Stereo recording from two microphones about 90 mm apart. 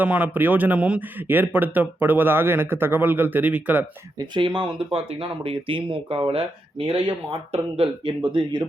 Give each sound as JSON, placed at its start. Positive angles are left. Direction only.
{"t": 0.0, "sound": "a man's voice", "side_deg": -20}
{"t": 4.4, "sound": "speech", "side_deg": -65}